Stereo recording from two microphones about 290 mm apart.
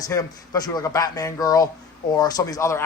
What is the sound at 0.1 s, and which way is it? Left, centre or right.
A man's voice, centre.